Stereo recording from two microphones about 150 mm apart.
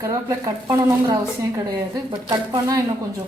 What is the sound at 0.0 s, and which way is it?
Speech, 20° right (ahead or behind).